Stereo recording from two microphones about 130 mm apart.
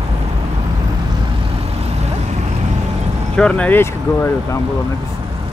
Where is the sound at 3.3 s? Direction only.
10° left (ahead or behind).